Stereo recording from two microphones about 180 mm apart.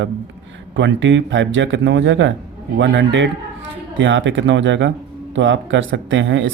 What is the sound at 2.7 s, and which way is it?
A man's voice, 80° right.